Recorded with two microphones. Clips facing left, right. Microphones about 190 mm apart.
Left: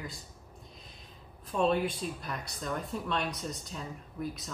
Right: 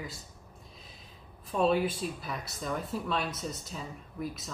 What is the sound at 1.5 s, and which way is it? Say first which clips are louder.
Speech: right 1 dB; 5° right (ahead or behind).